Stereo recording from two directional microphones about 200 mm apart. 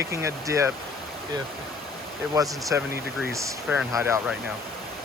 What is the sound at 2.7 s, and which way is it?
Speech, 10° right (ahead or behind).